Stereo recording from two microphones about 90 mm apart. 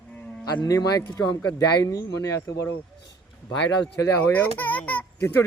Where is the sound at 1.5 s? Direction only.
40° left (ahead or behind).